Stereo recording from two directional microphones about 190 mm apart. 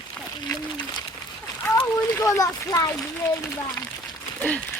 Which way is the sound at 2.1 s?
15° left (ahead or behind).